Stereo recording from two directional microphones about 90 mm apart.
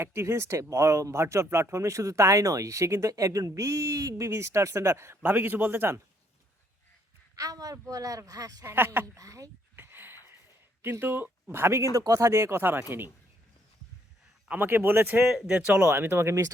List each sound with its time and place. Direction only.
0.0 s speech: 30° right (ahead or behind)
7.3 s speech: 40° right (ahead or behind)
8.6 s speech: 25° right (ahead or behind)
9.1 s speech: 40° right (ahead or behind)
9.7 s a sound: 20° right (ahead or behind)
11.0 s speech: 20° right (ahead or behind)
11.9 s speech: 40° right (ahead or behind); by 12.8 s 25° right (ahead or behind)
14.4 s speech: 20° right (ahead or behind)
15.3 s speech: 10° right (ahead or behind)
15.8 s speech: 25° right (ahead or behind)